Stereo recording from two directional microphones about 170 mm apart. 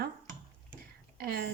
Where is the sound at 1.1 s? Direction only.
65° right (ahead or behind).